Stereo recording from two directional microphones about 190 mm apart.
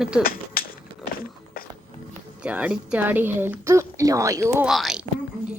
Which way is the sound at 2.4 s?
5° right (ahead or behind).